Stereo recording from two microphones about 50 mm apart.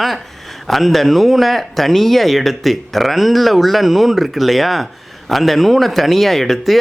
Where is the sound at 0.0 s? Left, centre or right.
Centre.